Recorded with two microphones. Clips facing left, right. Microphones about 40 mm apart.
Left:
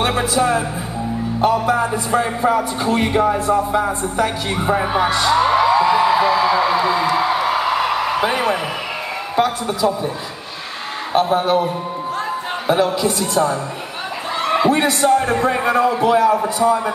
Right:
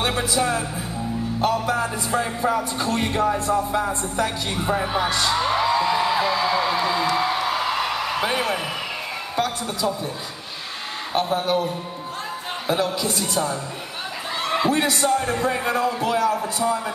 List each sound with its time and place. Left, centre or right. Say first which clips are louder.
0.0 s speech: left 5 dB; centre
11.2 s speech: left 6 dB; centre
14.4 s a sound: left 5 dB; centre
15.0 s speech: left 6 dB; centre